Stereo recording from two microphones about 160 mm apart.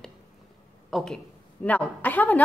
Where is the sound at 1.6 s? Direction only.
10° left (ahead or behind).